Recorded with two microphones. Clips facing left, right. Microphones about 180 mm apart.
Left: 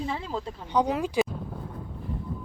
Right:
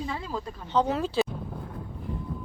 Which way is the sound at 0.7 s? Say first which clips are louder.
Even; 15° left (ahead or behind).